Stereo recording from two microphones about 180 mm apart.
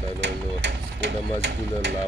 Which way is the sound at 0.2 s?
80° right.